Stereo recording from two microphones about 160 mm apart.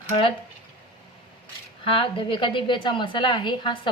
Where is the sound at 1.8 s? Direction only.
35° left (ahead or behind).